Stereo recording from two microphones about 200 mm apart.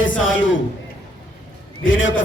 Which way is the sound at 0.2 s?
75° left (ahead or behind).